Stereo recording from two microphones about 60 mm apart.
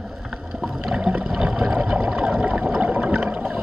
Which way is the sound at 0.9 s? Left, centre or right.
Centre.